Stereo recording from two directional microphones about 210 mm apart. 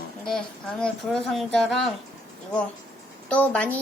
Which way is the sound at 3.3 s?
5° left (ahead or behind).